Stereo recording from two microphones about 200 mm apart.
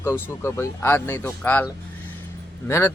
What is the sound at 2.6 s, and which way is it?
Speech, 15° left (ahead or behind).